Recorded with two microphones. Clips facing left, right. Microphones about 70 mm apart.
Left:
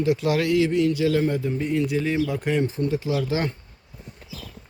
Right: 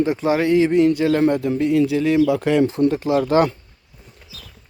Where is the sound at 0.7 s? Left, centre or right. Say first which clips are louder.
Right 5 dB; right.